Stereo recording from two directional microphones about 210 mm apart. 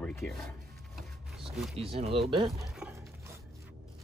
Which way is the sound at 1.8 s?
30° right (ahead or behind).